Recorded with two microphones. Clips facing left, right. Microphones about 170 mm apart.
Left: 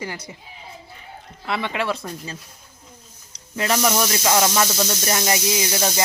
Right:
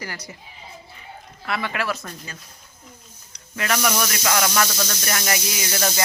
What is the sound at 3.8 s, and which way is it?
Speech, 25° left (ahead or behind).